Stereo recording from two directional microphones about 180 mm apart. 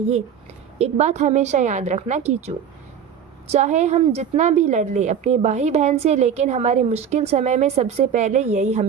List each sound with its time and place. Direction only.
0.8 s a woman's voice: 40° right (ahead or behind)
3.5 s a woman's voice: 40° right (ahead or behind)